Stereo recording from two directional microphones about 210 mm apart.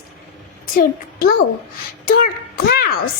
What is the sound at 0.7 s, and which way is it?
A child's voice, 45° left (ahead or behind).